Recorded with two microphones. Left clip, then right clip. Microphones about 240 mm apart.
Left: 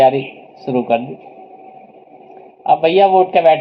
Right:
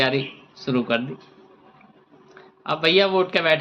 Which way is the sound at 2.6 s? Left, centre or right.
Centre.